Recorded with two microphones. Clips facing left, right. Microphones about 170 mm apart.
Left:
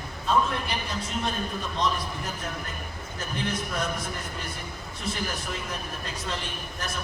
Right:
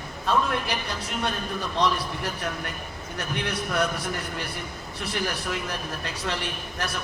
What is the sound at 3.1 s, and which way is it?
Speech, 75° right (ahead or behind).